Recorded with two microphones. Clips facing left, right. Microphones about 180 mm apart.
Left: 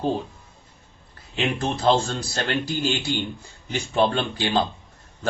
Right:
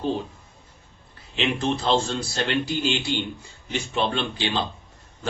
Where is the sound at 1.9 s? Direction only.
45° left (ahead or behind).